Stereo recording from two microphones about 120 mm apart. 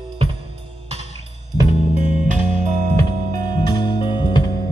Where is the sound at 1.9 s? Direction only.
90° right.